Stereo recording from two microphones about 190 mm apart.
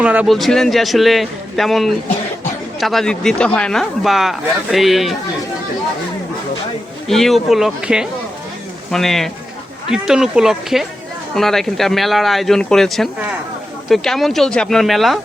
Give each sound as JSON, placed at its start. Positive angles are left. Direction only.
{"t": 0.0, "sound": "speech", "side_deg": -5}
{"t": 7.1, "sound": "speech", "side_deg": 0}